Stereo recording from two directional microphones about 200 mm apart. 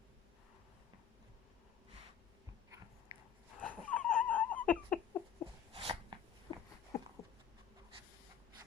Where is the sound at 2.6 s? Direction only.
15° right (ahead or behind).